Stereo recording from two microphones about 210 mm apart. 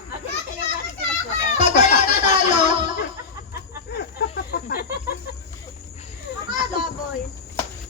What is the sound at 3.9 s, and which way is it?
Snake, 50° left (ahead or behind).